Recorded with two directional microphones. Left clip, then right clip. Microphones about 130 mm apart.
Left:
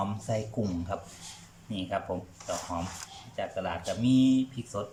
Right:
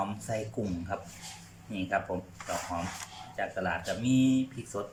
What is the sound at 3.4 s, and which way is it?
Speech, 25° left (ahead or behind).